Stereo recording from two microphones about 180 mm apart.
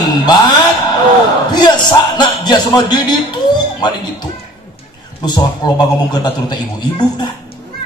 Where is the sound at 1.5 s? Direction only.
25° left (ahead or behind).